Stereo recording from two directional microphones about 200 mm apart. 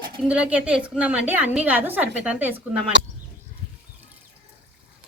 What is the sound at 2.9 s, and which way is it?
Speech, 60° right (ahead or behind).